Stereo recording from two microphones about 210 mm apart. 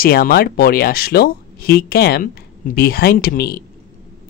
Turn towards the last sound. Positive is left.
turn(degrees=45)  # may be behind; listen again after turning